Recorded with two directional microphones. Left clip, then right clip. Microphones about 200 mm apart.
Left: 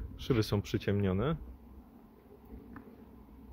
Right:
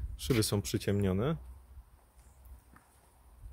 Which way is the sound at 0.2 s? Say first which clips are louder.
Right 1 dB; 5° right (ahead or behind).